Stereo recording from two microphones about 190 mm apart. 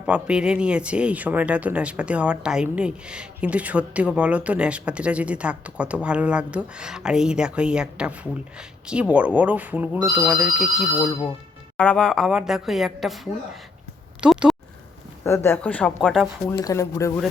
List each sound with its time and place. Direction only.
0.0 s a woman's voice: 5° right (ahead or behind)
14.2 s a sound: 5° right (ahead or behind)
15.2 s speech: 15° left (ahead or behind)
16.5 s speech: 15° left (ahead or behind)